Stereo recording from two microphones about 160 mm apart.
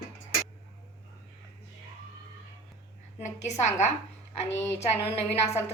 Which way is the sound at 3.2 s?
45° left (ahead or behind).